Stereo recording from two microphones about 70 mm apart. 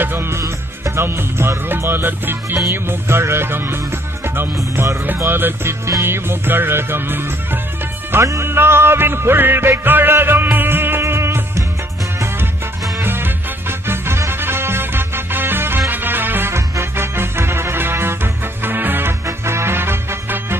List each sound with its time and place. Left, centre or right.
0.0 s music: right
8.1 s music: right
13.0 s music: right